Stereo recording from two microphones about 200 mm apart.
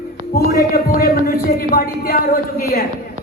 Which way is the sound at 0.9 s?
45° left (ahead or behind).